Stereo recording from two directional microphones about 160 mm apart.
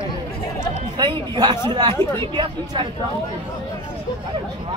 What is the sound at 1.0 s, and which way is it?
A man's voice, 25° right (ahead or behind).